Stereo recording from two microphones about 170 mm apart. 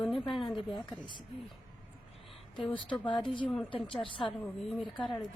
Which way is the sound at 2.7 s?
30° left (ahead or behind).